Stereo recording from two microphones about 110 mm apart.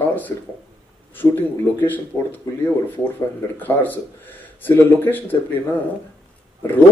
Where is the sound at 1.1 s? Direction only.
20° left (ahead or behind).